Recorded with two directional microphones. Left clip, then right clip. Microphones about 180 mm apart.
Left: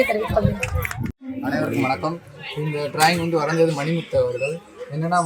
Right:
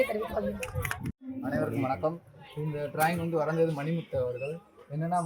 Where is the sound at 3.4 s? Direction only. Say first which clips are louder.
Left 6 dB; 50° right (ahead or behind).